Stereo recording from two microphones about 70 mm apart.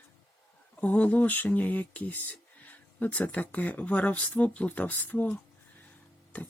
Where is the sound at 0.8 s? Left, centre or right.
Centre.